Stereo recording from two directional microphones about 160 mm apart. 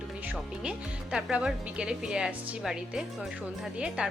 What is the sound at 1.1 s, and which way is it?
A woman's voice, 5° right (ahead or behind).